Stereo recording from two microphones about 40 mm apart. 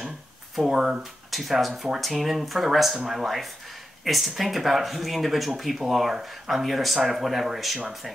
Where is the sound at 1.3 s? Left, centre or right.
Centre.